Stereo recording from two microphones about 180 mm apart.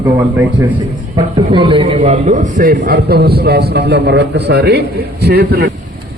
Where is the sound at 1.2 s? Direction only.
30° right (ahead or behind); by 2.8 s 50° right (ahead or behind).